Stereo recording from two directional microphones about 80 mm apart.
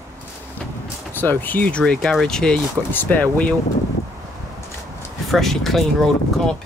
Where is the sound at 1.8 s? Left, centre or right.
Centre.